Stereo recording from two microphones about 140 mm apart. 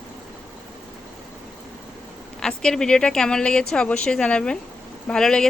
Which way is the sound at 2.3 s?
5° left (ahead or behind).